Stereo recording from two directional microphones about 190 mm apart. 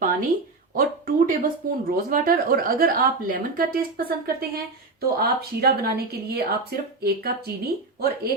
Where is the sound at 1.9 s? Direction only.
50° right (ahead or behind).